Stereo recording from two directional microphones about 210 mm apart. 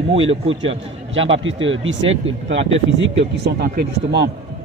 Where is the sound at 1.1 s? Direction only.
65° right (ahead or behind).